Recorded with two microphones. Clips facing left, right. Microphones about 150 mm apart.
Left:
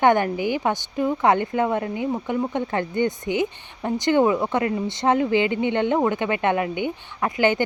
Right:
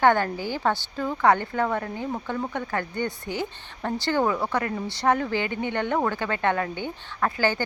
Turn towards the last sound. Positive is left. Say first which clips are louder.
# left 4 dB
turn(degrees=20)  # may be behind; listen again after turning